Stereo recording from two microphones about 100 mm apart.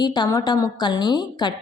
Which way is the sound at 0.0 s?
45° left (ahead or behind).